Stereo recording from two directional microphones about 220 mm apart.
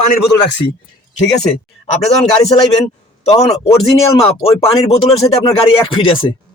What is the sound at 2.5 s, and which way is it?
A man's voice, 30° left (ahead or behind).